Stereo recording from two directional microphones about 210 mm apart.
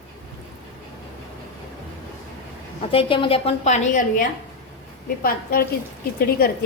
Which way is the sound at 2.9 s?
25° left (ahead or behind).